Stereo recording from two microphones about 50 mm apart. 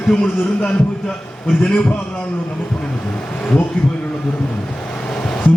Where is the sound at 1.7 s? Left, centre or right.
Left.